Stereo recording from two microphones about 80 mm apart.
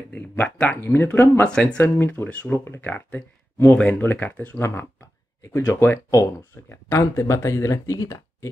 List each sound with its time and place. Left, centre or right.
0.1 s speech: centre
1.4 s speech: centre
1.8 s speech: left
2.2 s speech: centre
2.6 s speech: left
4.6 s speech: left